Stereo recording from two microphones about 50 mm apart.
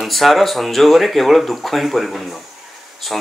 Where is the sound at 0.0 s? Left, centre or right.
Centre.